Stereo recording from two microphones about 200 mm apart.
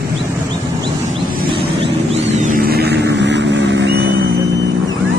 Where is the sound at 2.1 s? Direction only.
35° right (ahead or behind); by 4.0 s 60° right (ahead or behind).